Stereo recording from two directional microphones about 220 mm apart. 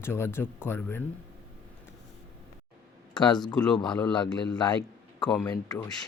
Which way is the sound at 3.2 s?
20° left (ahead or behind).